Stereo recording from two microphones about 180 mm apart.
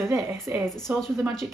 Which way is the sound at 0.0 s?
15° right (ahead or behind).